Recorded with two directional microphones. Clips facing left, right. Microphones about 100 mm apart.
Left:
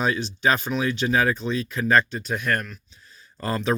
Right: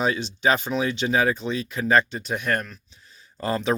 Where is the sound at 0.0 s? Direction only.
20° right (ahead or behind).